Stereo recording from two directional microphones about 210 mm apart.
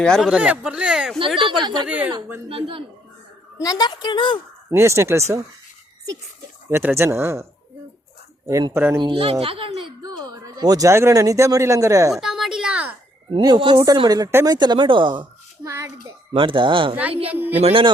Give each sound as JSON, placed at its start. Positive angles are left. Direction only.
{"t": 0.0, "sound": "speech", "side_deg": 0}
{"t": 1.4, "sound": "speech", "side_deg": -20}
{"t": 1.9, "sound": "speech", "side_deg": -5}
{"t": 2.5, "sound": "speech", "side_deg": -25}
{"t": 3.6, "sound": "a woman's voice", "side_deg": 20}
{"t": 4.7, "sound": "speech", "side_deg": -15}
{"t": 6.7, "sound": "speech", "side_deg": -10}
{"t": 8.4, "sound": "speech", "side_deg": -15}
{"t": 9.0, "sound": "speech", "side_deg": -25}
{"t": 12.1, "sound": "a sound", "side_deg": 0}
{"t": 13.3, "sound": "speech", "side_deg": -20}
{"t": 16.0, "sound": "speech", "side_deg": -25}